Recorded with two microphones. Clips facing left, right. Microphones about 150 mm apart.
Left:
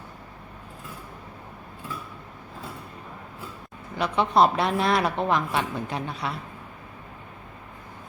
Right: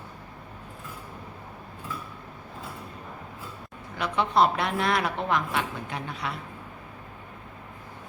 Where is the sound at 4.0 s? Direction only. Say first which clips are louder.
Left 3 dB; 20° left (ahead or behind).